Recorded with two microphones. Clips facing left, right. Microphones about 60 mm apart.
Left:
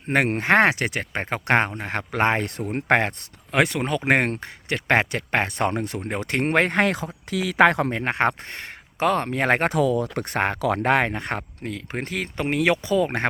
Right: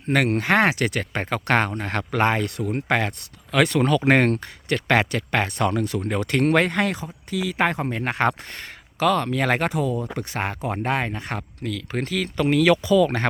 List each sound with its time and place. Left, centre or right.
0.1 s speech: left
2.1 s speech: left
3.5 s speech: left
6.7 s speech: left
7.3 s speech: left
8.0 s speech: left
9.6 s speech: left
10.2 s speech: left
10.6 s speech: left
11.6 s speech: left